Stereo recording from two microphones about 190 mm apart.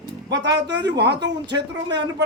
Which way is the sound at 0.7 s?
65° right (ahead or behind).